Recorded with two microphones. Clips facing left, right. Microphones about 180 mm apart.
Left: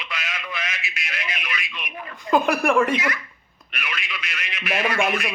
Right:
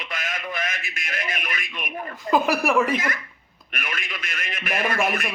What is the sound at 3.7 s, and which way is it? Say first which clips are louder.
Radio: even; 45° right (ahead or behind).